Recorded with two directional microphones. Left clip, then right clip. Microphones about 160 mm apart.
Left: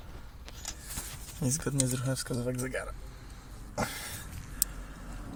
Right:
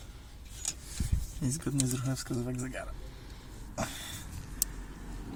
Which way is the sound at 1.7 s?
70° left (ahead or behind).